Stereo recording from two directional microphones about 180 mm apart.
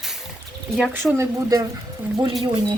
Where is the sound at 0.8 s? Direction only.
10° right (ahead or behind).